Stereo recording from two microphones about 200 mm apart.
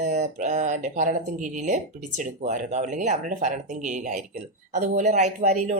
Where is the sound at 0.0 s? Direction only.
35° right (ahead or behind).